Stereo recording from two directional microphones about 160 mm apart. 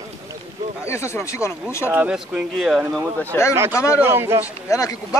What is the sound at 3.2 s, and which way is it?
Speech, 10° left (ahead or behind).